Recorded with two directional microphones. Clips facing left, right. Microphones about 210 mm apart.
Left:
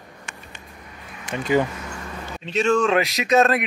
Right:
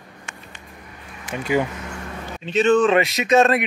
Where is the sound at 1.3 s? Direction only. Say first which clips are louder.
Left 1 dB; 10° right (ahead or behind).